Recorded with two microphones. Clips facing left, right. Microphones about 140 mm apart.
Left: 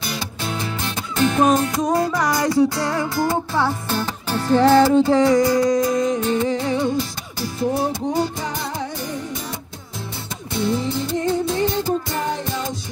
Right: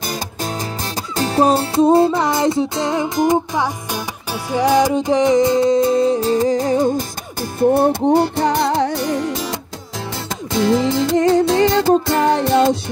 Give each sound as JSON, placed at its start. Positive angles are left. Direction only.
{"t": 0.0, "sound": "music", "side_deg": -45}